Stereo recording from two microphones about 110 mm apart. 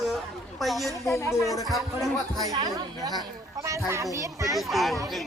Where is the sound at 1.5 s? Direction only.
Centre (ahead or behind).